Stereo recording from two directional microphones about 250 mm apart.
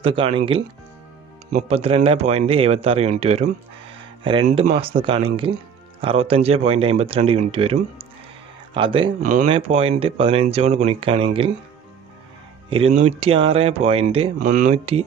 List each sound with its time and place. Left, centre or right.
0.0 s speech: right
12.6 s speech: right